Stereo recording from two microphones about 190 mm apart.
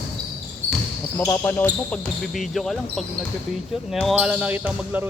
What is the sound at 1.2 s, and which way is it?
Speech, 10° left (ahead or behind).